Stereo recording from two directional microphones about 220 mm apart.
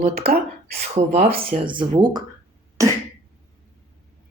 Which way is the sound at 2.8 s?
15° right (ahead or behind).